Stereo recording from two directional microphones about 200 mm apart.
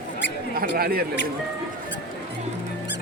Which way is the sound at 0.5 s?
50° right (ahead or behind).